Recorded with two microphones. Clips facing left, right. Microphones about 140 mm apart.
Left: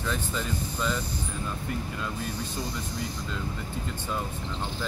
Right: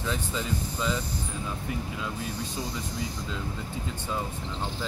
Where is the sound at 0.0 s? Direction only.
15° right (ahead or behind).